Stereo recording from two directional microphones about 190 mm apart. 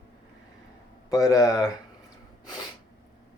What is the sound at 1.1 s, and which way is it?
Speech, 20° left (ahead or behind).